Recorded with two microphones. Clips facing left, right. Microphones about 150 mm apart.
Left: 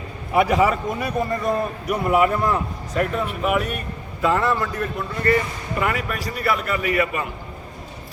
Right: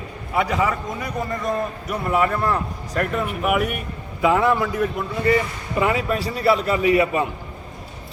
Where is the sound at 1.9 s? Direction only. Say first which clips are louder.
Left 3 dB; 10° left (ahead or behind).